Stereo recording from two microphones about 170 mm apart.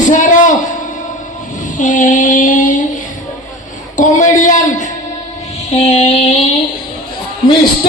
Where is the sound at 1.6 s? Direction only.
50° left (ahead or behind).